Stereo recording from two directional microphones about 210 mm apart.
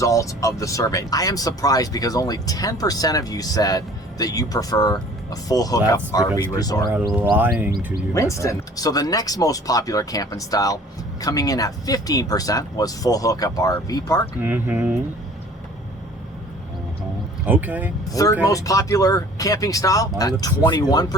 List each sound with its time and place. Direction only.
0.0 s speech: 15° left (ahead or behind)
7.0 s speech: 10° right (ahead or behind)
8.1 s speech: 15° left (ahead or behind)
14.4 s speech: 10° right (ahead or behind)
17.4 s speech: 10° right (ahead or behind)
18.2 s speech: 15° left (ahead or behind)